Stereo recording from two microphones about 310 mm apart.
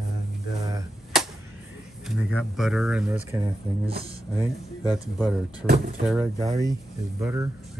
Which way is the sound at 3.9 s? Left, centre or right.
Centre.